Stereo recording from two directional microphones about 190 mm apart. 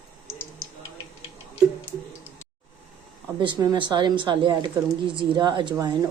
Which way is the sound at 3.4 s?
25° right (ahead or behind).